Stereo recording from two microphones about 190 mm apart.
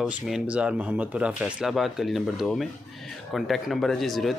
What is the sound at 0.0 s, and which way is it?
Speech, 5° right (ahead or behind).